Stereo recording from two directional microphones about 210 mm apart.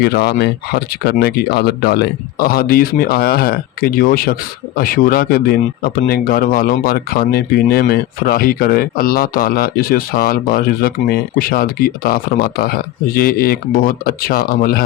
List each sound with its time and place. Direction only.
0.0 s speech: 50° left (ahead or behind)